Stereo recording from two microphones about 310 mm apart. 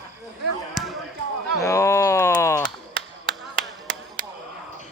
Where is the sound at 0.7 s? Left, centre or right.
Centre.